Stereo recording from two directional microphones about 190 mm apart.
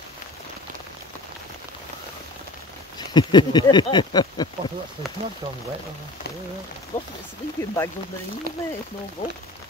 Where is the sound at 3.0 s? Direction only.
20° left (ahead or behind).